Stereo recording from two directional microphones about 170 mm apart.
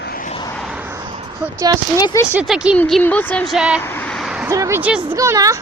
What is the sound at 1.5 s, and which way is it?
Speech, 20° right (ahead or behind).